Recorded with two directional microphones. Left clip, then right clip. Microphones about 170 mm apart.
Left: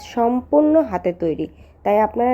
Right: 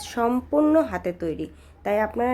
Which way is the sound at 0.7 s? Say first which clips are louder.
Left 4 dB; 10° left (ahead or behind).